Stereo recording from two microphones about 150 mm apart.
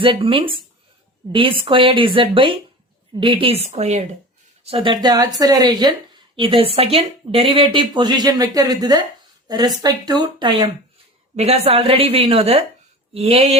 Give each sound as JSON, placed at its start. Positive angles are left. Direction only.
{"t": 0.0, "sound": "speech", "side_deg": -35}
{"t": 4.6, "sound": "a woman's voice", "side_deg": -35}
{"t": 11.3, "sound": "speech", "side_deg": -45}